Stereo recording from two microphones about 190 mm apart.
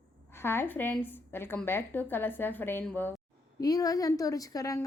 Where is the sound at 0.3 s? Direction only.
10° left (ahead or behind).